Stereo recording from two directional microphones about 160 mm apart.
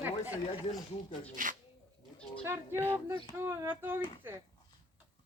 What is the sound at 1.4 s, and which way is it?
Speech, 55° right (ahead or behind).